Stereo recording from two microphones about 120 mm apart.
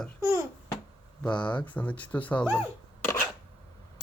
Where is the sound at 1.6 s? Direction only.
15° left (ahead or behind).